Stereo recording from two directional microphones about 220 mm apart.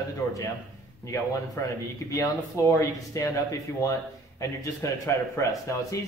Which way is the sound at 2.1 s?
15° left (ahead or behind).